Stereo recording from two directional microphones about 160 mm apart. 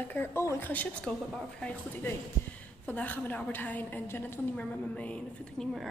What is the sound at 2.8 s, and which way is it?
A woman's voice, 10° left (ahead or behind).